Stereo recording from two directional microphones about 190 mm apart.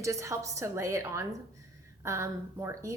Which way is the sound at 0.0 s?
15° right (ahead or behind).